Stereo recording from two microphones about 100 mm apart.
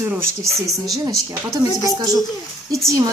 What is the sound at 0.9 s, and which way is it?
Speech, 35° right (ahead or behind).